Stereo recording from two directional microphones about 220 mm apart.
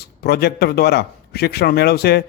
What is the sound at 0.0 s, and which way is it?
A man's voice, 45° left (ahead or behind).